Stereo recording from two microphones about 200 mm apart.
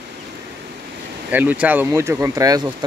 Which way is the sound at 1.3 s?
10° right (ahead or behind).